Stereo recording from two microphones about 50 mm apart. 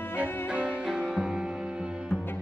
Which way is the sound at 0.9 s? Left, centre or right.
Centre.